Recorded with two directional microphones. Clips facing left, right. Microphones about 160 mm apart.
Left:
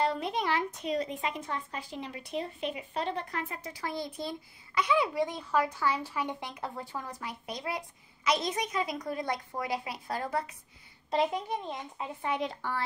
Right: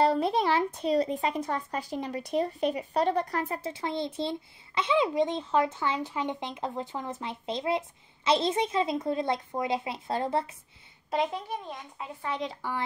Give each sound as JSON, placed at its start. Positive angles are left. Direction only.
{"t": 0.0, "sound": "speech", "side_deg": -35}
{"t": 3.7, "sound": "a child's voice", "side_deg": -25}
{"t": 11.2, "sound": "a child's voice", "side_deg": 15}
{"t": 12.3, "sound": "a woman's voice", "side_deg": 5}